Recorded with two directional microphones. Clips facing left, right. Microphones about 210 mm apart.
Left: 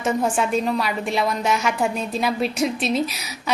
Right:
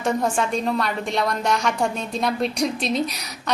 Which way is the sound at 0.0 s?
5° left (ahead or behind).